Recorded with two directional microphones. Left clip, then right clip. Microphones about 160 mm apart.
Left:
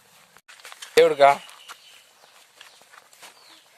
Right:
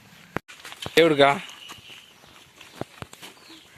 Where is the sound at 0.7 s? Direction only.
Centre (ahead or behind).